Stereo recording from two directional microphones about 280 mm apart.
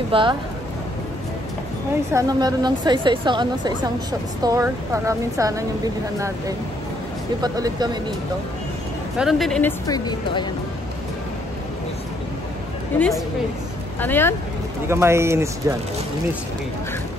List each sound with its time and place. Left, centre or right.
0.1 s speech: centre
2.1 s speech: centre
7.4 s speech: centre
9.2 s speech: centre
13.9 s speech: centre
14.9 s speech: centre